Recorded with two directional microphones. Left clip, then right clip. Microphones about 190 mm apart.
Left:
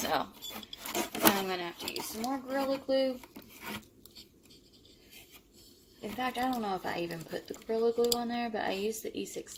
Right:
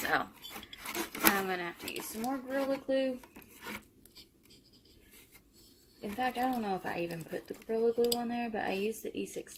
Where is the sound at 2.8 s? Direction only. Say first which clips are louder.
Left 4 dB; 15° left (ahead or behind).